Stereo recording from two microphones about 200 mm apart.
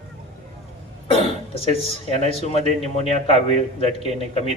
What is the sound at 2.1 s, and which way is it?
Speech, 30° left (ahead or behind).